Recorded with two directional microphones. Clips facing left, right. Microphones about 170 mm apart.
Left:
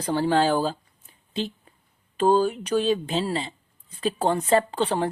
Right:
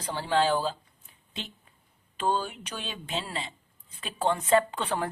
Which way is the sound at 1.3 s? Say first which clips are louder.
Left 12 dB; 35° left (ahead or behind).